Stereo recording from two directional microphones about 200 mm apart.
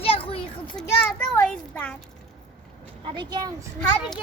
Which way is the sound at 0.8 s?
5° left (ahead or behind).